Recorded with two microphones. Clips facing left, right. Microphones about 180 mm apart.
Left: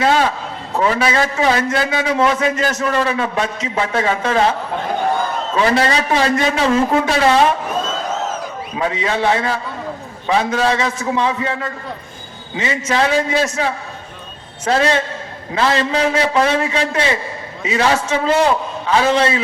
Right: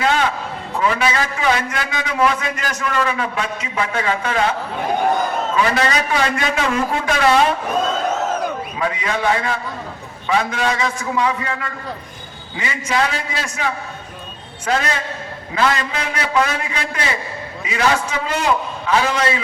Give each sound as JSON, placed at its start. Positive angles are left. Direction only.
{"t": 0.0, "sound": "a sound", "side_deg": 35}
{"t": 0.8, "sound": "a man's voice", "side_deg": 35}
{"t": 5.5, "sound": "a man's voice", "side_deg": 30}
{"t": 8.8, "sound": "a man's voice", "side_deg": 30}